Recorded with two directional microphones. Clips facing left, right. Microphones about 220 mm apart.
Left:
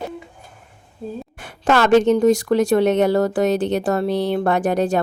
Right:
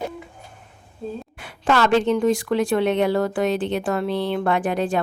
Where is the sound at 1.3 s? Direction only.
45° left (ahead or behind).